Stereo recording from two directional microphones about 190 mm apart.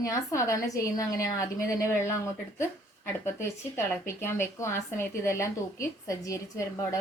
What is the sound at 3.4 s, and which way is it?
A woman's voice, 10° left (ahead or behind).